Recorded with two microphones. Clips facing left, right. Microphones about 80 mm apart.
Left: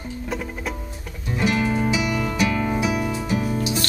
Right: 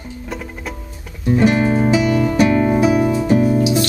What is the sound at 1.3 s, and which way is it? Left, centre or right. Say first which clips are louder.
Music: right 7 dB; right.